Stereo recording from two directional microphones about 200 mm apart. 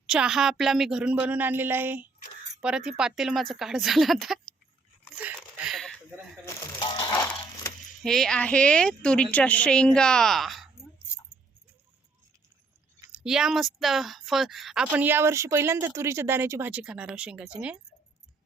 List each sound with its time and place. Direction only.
0.1 s speech: 5° right (ahead or behind)
5.2 s a sound: centre (ahead or behind)
6.4 s crumpling: 20° left (ahead or behind)
8.0 s speech: centre (ahead or behind)
13.1 s speech: 5° right (ahead or behind)